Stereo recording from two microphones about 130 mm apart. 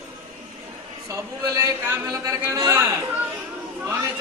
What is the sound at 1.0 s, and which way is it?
Speech, 25° right (ahead or behind).